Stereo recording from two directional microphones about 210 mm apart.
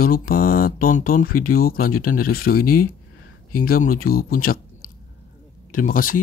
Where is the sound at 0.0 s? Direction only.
45° left (ahead or behind).